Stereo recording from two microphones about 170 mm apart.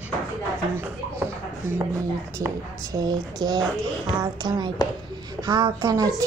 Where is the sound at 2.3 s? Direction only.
20° right (ahead or behind).